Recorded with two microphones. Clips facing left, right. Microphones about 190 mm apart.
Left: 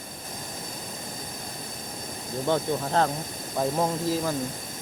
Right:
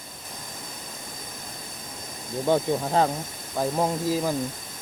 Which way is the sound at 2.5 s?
10° right (ahead or behind).